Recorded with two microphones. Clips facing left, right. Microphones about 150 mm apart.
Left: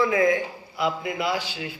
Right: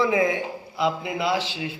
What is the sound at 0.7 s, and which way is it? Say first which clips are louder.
Speech: right 1 dB; 25° right (ahead or behind).